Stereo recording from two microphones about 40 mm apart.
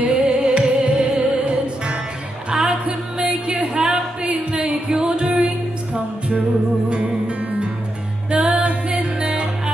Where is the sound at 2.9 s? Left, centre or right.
Right.